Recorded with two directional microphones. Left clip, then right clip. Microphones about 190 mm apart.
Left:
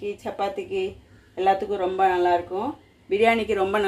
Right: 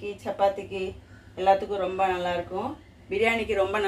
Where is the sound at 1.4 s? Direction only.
45° left (ahead or behind).